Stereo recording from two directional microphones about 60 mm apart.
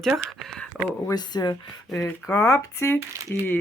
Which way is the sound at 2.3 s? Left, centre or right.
Left.